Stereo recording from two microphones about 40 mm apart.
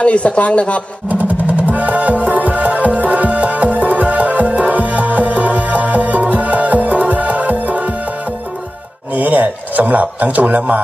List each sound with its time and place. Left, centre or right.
0.0 s speech: left
1.6 s music: right
9.1 s a sound: right